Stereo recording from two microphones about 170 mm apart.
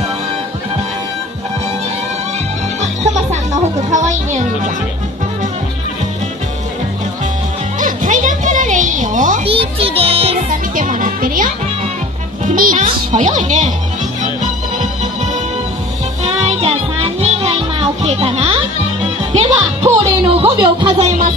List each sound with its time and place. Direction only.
2.8 s music: 40° right (ahead or behind)
3.9 s speech: 45° right (ahead or behind)
7.8 s music: 50° right (ahead or behind)
9.4 s music: 35° right (ahead or behind)
10.5 s music: 50° right (ahead or behind)
12.5 s a child's voice: 55° right (ahead or behind)
16.3 s music: 40° right (ahead or behind)